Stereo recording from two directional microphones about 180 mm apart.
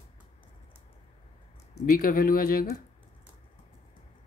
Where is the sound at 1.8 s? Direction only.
50° left (ahead or behind).